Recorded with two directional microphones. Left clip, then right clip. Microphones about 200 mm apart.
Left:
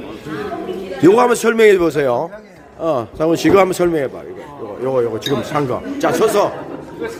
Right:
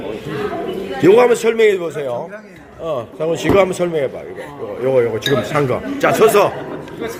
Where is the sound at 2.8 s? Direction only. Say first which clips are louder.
Left 3 dB; 45° left (ahead or behind).